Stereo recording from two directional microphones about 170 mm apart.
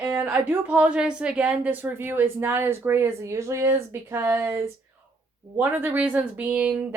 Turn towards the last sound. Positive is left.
turn(degrees=-10)  # may be behind; listen again after turning